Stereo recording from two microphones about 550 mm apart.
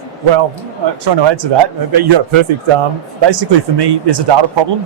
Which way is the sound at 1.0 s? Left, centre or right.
Right.